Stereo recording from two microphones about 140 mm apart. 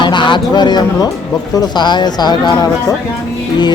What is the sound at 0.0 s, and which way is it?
Speech, 35° left (ahead or behind).